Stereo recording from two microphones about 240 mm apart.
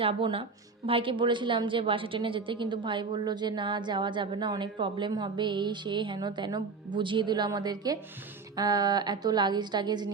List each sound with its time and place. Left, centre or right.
0.0 s a woman's voice: right